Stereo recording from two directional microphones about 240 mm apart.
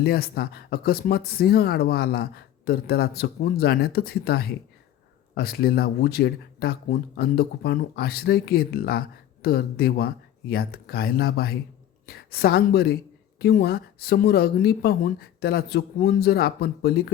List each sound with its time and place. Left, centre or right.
0.0 s speech: left